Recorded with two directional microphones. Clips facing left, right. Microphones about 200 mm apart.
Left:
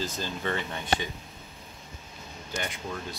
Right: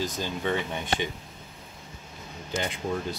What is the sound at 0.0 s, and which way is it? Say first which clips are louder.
Speech: right 3 dB; 15° right (ahead or behind).